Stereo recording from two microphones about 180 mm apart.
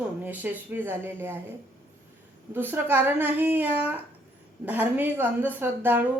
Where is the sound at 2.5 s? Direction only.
10° right (ahead or behind).